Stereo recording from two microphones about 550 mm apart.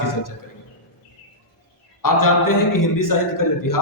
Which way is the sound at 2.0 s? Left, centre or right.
Left.